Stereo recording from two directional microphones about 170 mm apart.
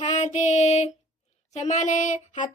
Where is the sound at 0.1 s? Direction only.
45° left (ahead or behind).